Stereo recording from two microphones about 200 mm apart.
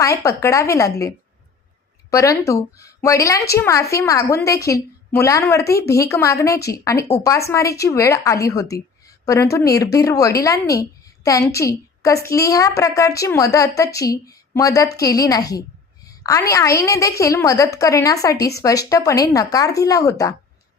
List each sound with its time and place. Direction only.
0.0 s a woman's voice: 15° left (ahead or behind)